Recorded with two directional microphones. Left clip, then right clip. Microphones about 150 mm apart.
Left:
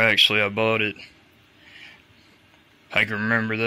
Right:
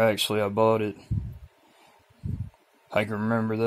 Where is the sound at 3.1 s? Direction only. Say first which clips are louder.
Left 5 dB; 15° left (ahead or behind).